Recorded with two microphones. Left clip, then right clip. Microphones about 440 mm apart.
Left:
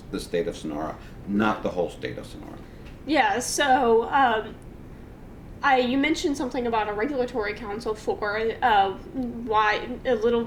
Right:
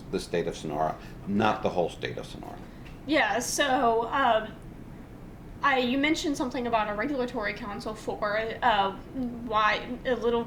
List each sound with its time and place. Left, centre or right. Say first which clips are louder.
0.1 s speech: left 2 dB; right
3.1 s a woman's voice: left 3 dB; left
5.6 s a woman's voice: left 3 dB; left